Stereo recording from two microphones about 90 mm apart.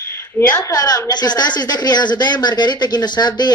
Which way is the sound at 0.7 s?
45° left (ahead or behind).